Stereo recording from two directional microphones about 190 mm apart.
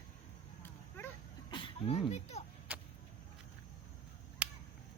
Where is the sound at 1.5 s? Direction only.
25° left (ahead or behind).